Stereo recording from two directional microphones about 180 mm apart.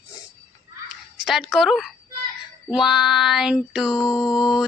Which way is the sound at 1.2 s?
Centre (ahead or behind).